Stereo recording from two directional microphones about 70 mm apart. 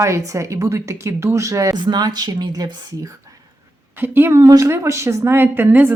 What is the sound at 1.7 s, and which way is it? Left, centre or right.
A woman's voice, right.